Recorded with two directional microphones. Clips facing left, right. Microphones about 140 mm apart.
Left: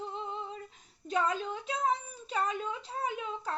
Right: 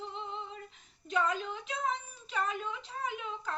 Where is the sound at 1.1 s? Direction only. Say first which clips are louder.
Left 1 dB; 35° left (ahead or behind).